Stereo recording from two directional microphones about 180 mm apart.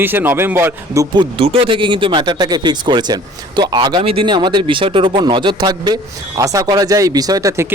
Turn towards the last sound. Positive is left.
turn(degrees=-20)  # may be behind; listen again after turning